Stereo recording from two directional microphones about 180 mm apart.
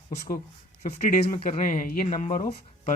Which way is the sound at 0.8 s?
40° left (ahead or behind).